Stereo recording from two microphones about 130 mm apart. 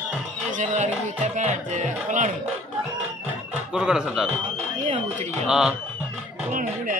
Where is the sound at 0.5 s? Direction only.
70° right (ahead or behind).